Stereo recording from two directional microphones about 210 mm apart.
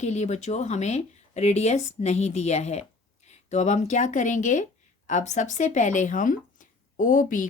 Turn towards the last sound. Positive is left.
turn(degrees=40)  # may be behind; listen again after turning